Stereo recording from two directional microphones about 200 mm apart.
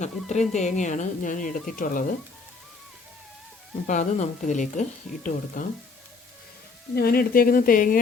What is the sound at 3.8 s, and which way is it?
Speech, 40° left (ahead or behind).